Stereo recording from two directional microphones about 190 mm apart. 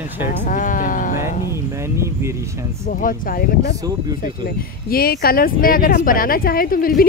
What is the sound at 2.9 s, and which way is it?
Speech, 45° left (ahead or behind).